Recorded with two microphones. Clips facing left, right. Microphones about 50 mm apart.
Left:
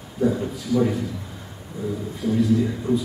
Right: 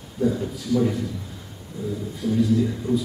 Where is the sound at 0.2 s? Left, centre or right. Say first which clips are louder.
Left 1 dB; centre.